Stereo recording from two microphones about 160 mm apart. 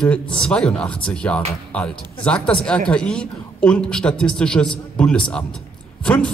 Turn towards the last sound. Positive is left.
turn(degrees=5)  # may be behind; listen again after turning